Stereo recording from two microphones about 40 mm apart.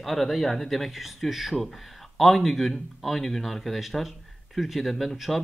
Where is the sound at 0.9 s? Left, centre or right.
Centre.